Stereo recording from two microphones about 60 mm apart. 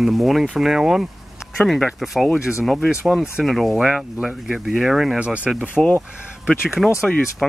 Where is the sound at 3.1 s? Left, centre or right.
Centre.